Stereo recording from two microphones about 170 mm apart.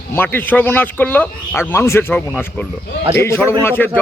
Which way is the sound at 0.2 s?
10° left (ahead or behind).